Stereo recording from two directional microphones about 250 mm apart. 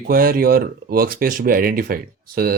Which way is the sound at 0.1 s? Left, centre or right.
Right.